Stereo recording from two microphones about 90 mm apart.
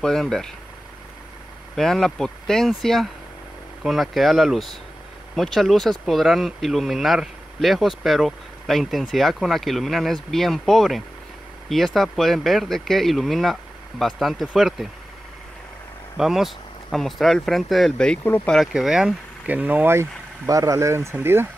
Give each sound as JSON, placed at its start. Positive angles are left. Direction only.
{"t": 0.0, "sound": "speech", "side_deg": 5}
{"t": 1.8, "sound": "speech", "side_deg": 5}
{"t": 16.2, "sound": "speech", "side_deg": -5}
{"t": 18.2, "sound": "speech", "side_deg": 25}
{"t": 18.5, "sound": "speech", "side_deg": 0}
{"t": 19.4, "sound": "speech", "side_deg": -20}